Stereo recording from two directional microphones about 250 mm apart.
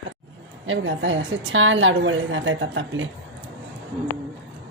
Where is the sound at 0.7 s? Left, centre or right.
Right.